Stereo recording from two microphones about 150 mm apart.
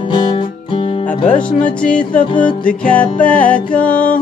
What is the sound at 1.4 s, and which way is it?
Music, 5° left (ahead or behind).